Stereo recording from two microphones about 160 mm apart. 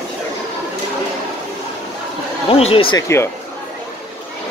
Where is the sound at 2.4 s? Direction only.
35° left (ahead or behind).